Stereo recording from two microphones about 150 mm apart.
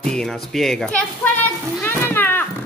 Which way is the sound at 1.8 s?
15° left (ahead or behind).